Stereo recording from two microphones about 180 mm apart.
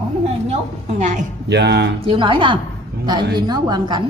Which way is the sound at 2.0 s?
25° right (ahead or behind).